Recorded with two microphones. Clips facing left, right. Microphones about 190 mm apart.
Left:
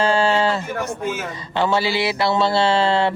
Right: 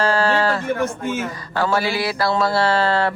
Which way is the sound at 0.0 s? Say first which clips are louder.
Left 1 dB; 25° left (ahead or behind).